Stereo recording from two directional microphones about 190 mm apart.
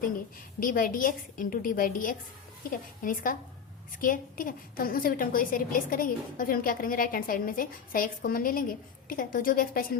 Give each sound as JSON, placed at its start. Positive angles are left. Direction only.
{"t": 0.6, "sound": "a woman's voice", "side_deg": 45}